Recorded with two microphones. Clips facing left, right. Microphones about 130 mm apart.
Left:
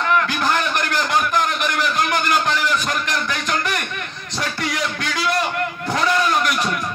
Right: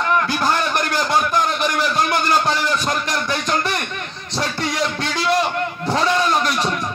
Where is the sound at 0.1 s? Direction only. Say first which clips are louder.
Even; 35° right (ahead or behind).